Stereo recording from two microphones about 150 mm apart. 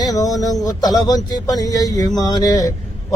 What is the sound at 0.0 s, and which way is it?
Speech, 25° left (ahead or behind).